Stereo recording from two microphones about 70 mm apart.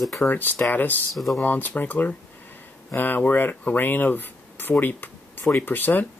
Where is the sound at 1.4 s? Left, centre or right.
Left.